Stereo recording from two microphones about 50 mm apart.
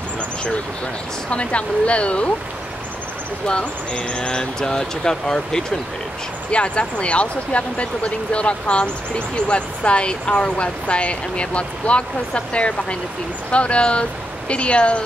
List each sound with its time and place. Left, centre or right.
1.3 s speech: left
3.4 s speech: centre